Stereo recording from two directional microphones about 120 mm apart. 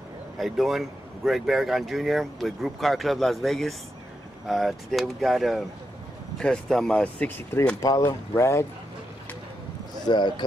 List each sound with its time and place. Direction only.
0.4 s speech: centre (ahead or behind); by 7.7 s 15° left (ahead or behind)
7.8 s speech: 30° left (ahead or behind)
10.0 s speech: 40° left (ahead or behind)